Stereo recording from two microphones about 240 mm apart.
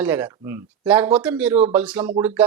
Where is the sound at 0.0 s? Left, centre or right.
Centre.